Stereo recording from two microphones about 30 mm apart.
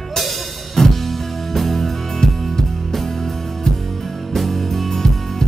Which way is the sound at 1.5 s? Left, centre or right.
Centre.